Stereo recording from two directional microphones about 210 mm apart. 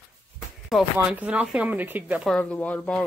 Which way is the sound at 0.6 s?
Centre (ahead or behind).